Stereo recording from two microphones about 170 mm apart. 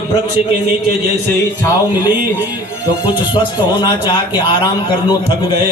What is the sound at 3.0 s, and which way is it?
Speech, 25° left (ahead or behind).